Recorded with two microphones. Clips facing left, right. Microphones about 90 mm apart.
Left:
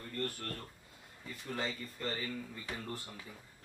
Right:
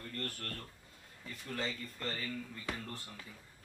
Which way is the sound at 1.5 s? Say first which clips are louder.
Left 1 dB; 15° left (ahead or behind).